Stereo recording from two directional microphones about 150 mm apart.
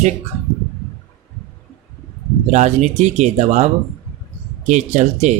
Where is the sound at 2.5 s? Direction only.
50° right (ahead or behind).